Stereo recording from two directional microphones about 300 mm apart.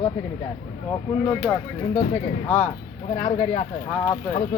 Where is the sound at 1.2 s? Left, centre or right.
Centre.